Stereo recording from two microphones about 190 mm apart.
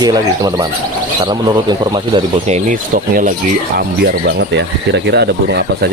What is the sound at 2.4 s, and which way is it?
Speech, 40° right (ahead or behind).